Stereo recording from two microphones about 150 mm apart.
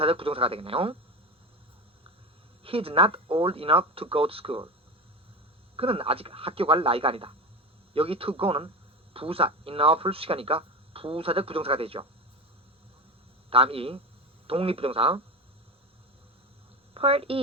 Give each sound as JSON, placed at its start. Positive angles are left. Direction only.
{"t": 0.0, "sound": "speech", "side_deg": -40}
{"t": 2.6, "sound": "speech", "side_deg": -40}
{"t": 5.7, "sound": "speech", "side_deg": -40}
{"t": 13.5, "sound": "speech", "side_deg": -40}
{"t": 16.9, "sound": "speech", "side_deg": -40}